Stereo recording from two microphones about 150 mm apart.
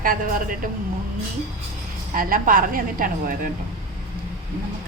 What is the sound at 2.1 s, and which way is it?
A woman's voice, 65° right (ahead or behind).